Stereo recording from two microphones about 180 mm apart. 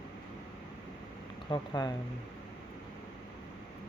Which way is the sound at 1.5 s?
25° left (ahead or behind).